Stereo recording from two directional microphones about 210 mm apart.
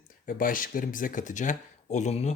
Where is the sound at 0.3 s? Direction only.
40° left (ahead or behind).